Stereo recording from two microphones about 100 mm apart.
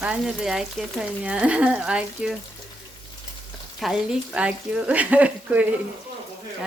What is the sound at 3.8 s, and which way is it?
Speech, centre (ahead or behind).